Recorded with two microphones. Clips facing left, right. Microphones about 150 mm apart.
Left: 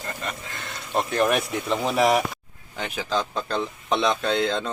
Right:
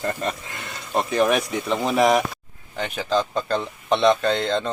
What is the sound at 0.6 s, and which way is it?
Speech, 5° right (ahead or behind).